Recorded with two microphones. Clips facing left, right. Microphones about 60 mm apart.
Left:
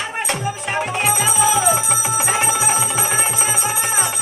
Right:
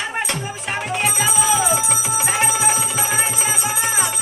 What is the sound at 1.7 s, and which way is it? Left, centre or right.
Music, left.